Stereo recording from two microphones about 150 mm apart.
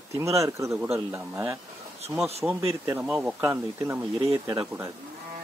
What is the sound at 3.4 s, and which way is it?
Speech, 20° right (ahead or behind).